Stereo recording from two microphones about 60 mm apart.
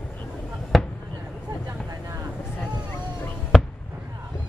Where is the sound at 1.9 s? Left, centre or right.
Right.